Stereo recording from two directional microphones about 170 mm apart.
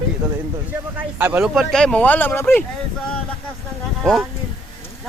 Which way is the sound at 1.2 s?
10° right (ahead or behind).